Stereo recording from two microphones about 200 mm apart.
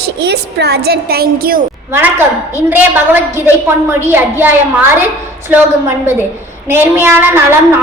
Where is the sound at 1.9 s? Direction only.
10° right (ahead or behind).